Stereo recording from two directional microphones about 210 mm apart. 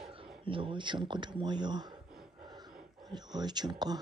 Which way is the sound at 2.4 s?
20° right (ahead or behind).